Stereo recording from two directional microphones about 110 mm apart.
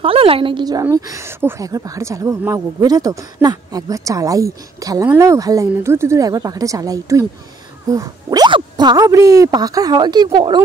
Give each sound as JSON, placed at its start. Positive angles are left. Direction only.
{"t": 0.0, "sound": "a woman's voice", "side_deg": -55}
{"t": 0.9, "sound": "speech", "side_deg": -30}